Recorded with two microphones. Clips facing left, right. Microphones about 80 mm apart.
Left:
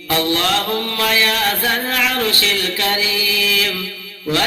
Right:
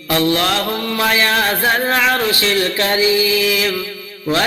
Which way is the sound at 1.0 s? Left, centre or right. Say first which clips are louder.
Right 3 dB; right.